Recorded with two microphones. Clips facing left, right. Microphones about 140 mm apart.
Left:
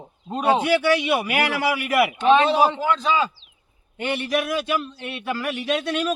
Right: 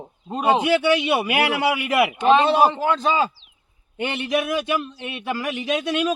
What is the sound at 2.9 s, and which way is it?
Speech, 45° right (ahead or behind).